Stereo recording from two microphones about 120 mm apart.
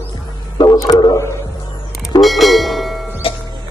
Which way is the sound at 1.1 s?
25° left (ahead or behind).